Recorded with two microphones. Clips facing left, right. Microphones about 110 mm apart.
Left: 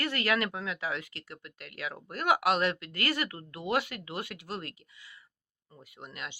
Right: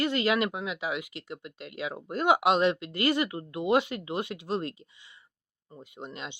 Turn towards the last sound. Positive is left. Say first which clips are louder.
# right 4 dB
turn(degrees=-20)  # may be behind; listen again after turning